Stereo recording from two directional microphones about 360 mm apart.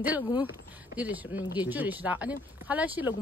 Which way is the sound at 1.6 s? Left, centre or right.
Centre.